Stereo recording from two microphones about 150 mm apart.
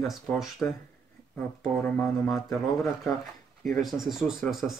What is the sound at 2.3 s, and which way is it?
Speech, 20° left (ahead or behind).